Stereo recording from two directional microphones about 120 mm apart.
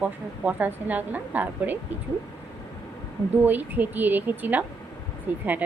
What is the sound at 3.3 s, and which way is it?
A woman's voice, 15° right (ahead or behind).